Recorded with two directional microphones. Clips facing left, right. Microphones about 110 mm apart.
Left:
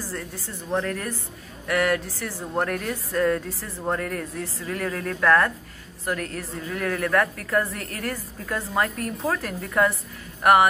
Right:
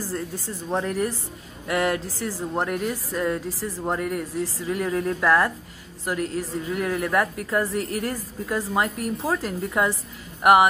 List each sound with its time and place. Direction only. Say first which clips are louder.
0.7 s a woman's voice: right 2 dB; 15° right (ahead or behind)
2.5 s speech: left 1 dB; 15° right (ahead or behind)
3.4 s speech: right 5 dB; 30° right (ahead or behind)
3.8 s a woman's voice: even; 15° right (ahead or behind)